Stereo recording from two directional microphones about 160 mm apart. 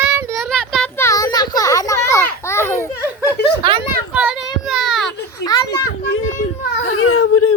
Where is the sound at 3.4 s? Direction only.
90° left.